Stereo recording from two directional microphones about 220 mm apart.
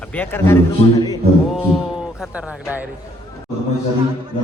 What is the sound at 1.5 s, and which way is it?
A man's voice, centre (ahead or behind).